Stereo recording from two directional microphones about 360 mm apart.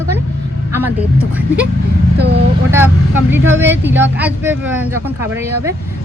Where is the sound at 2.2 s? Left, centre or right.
Right.